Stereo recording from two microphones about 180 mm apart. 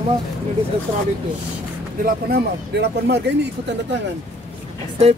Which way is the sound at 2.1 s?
60° right (ahead or behind).